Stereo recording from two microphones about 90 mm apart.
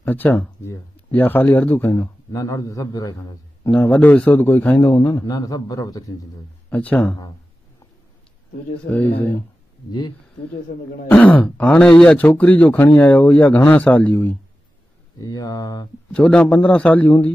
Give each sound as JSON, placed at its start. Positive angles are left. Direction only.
{"t": 0.0, "sound": "speech", "side_deg": 20}
{"t": 2.9, "sound": "a man's voice", "side_deg": 45}
{"t": 3.8, "sound": "a man's voice", "side_deg": 15}
{"t": 4.9, "sound": "a man's voice", "side_deg": 45}
{"t": 6.7, "sound": "speech", "side_deg": 15}
{"t": 8.8, "sound": "a man's voice", "side_deg": 20}
{"t": 11.1, "sound": "a man's voice", "side_deg": 15}
{"t": 15.1, "sound": "a man's voice", "side_deg": 40}
{"t": 16.1, "sound": "speech", "side_deg": 10}